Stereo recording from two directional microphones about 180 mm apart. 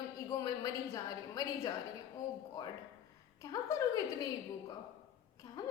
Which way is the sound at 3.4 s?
20° left (ahead or behind).